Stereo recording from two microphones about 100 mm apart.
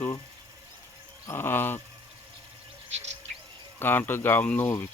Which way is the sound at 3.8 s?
20° left (ahead or behind).